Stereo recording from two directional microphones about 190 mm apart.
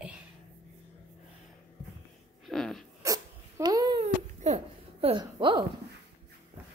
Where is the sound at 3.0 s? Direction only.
20° right (ahead or behind).